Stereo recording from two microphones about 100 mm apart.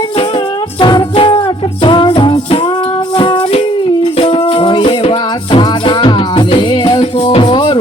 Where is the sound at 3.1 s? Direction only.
55° left (ahead or behind).